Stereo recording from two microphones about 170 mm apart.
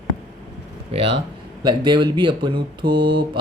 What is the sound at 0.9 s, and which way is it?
Speech, 35° right (ahead or behind).